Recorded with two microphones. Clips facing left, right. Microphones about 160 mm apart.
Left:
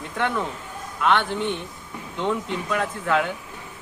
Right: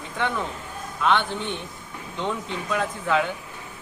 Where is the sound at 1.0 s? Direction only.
Centre (ahead or behind).